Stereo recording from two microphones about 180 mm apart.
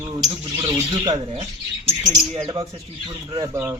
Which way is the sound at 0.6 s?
25° right (ahead or behind).